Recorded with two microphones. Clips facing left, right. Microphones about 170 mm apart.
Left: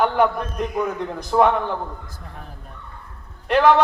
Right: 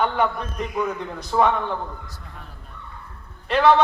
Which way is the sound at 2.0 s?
45° left (ahead or behind).